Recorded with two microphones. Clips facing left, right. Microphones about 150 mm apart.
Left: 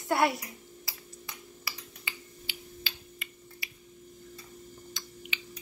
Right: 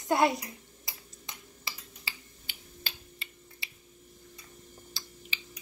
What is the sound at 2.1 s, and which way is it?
Finger snapping, 30° right (ahead or behind).